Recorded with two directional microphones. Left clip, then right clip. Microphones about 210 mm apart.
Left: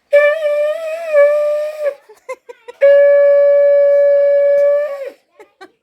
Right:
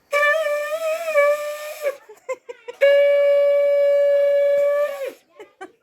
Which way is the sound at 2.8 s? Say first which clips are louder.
Left 7 dB; 40° right (ahead or behind).